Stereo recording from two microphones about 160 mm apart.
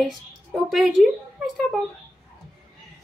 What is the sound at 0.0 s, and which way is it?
A woman's voice, centre (ahead or behind).